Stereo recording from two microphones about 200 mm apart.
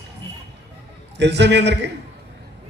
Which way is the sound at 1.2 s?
60° right (ahead or behind).